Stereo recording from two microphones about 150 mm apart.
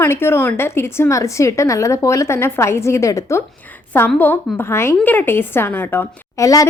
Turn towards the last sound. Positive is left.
turn(degrees=20)  # may be behind; listen again after turning